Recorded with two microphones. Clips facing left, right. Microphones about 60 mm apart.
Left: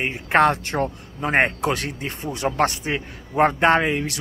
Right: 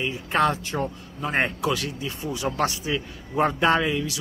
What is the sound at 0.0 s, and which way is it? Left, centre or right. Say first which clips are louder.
Speech: left 5 dB; left.